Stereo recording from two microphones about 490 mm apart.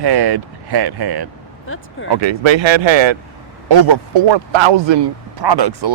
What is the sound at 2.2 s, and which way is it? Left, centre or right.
Speech, right.